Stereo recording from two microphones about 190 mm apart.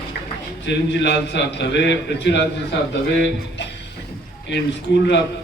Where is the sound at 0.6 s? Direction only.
65° left (ahead or behind).